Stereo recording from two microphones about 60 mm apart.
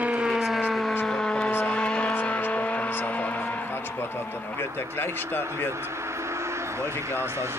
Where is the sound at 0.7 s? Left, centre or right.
Centre.